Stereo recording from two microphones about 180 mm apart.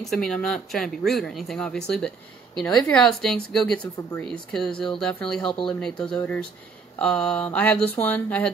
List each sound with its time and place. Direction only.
0.0 s speech: centre (ahead or behind)
5.5 s speech: 30° left (ahead or behind)
5.8 s speech: 5° left (ahead or behind)
7.0 s mantra: 5° left (ahead or behind)